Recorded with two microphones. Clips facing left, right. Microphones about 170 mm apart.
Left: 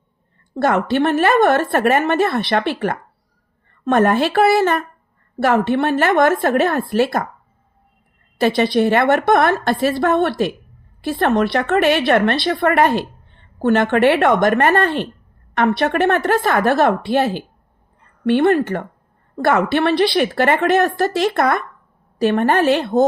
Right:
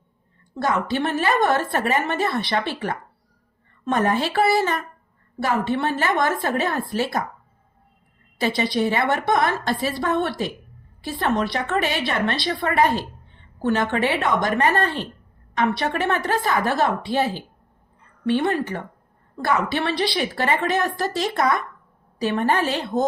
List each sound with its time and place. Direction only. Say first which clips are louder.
0.5 s a woman's voice: left 6 dB; 65° left (ahead or behind)
8.4 s a woman's voice: left 6 dB; 65° left (ahead or behind)